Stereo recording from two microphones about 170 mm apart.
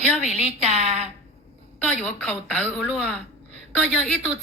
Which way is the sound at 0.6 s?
40° right (ahead or behind).